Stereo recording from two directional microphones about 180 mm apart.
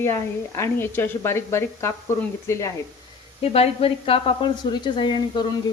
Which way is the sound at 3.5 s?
35° left (ahead or behind).